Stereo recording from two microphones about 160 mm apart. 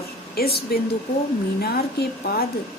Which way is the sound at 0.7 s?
75° left (ahead or behind).